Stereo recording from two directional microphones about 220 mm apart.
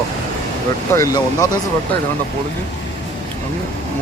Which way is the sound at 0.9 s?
15° left (ahead or behind).